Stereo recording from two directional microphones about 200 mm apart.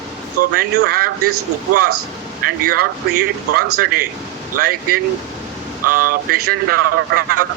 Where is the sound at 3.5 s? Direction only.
45° right (ahead or behind).